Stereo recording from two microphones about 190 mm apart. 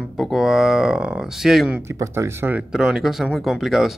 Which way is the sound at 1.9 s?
15° right (ahead or behind).